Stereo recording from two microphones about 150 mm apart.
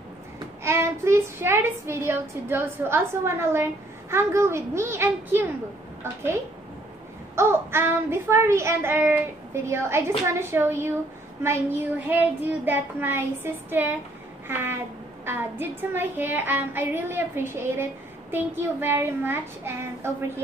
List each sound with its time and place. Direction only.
0.7 s a child's voice: 15° right (ahead or behind)
7.3 s a child's voice: 15° right (ahead or behind)
12.1 s a child's voice: 10° right (ahead or behind)